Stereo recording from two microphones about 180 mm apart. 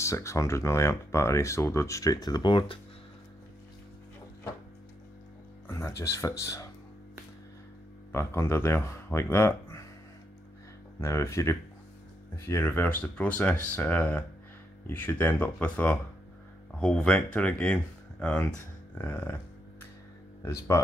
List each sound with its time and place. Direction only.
0.0 s speech: 15° left (ahead or behind)
5.7 s speech: 15° left (ahead or behind)
8.1 s speech: 15° left (ahead or behind)
11.0 s speech: 15° left (ahead or behind)
20.7 s speech: 15° left (ahead or behind)